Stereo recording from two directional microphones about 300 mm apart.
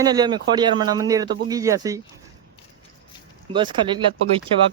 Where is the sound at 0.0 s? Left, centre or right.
Centre.